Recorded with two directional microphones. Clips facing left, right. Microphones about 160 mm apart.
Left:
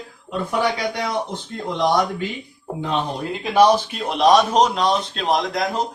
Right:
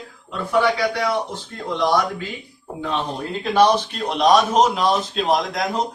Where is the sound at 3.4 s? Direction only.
15° left (ahead or behind).